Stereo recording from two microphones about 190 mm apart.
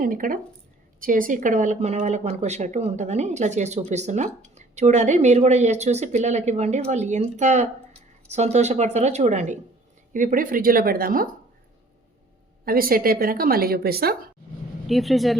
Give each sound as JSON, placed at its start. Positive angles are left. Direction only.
{"t": 0.0, "sound": "a woman's voice", "side_deg": -45}
{"t": 12.6, "sound": "a woman's voice", "side_deg": -50}
{"t": 14.8, "sound": "speech", "side_deg": 0}